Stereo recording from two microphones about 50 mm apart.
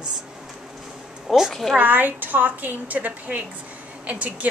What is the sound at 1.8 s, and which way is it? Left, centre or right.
A woman's voice, right.